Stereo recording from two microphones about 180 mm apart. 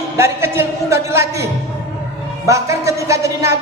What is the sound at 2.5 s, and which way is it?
A man's voice, 15° right (ahead or behind).